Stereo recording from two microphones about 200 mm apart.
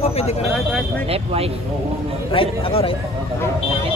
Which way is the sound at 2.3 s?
25° left (ahead or behind).